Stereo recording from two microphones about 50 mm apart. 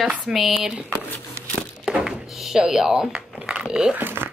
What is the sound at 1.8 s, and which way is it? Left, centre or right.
Thunk, centre.